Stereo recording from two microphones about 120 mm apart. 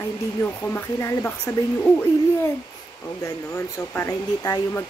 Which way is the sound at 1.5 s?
25° left (ahead or behind).